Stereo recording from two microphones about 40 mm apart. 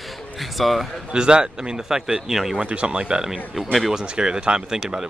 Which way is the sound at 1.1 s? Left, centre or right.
Right.